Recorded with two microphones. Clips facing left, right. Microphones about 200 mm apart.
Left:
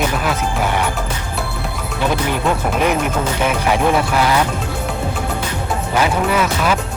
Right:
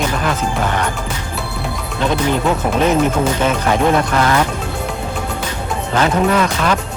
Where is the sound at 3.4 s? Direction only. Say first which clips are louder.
Left 1 dB; 10° left (ahead or behind).